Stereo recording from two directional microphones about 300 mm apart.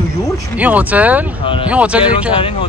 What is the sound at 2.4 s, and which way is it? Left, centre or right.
Speech, centre.